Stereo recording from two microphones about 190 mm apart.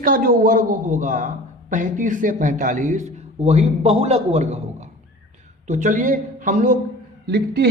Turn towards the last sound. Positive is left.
turn(degrees=-60)  # may be behind; listen again after turning